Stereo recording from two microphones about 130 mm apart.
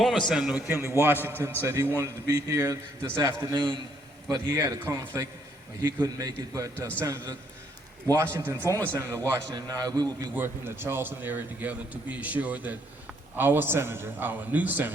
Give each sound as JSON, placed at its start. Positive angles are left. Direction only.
{"t": 0.0, "sound": "a man's voice", "side_deg": 0}
{"t": 0.7, "sound": "a man's voice", "side_deg": -20}
{"t": 3.5, "sound": "a man's voice", "side_deg": -35}
{"t": 6.7, "sound": "a man's voice", "side_deg": 10}
{"t": 7.0, "sound": "a man's voice", "side_deg": -25}
{"t": 9.5, "sound": "a man's voice", "side_deg": -30}
{"t": 10.3, "sound": "a man's voice", "side_deg": -15}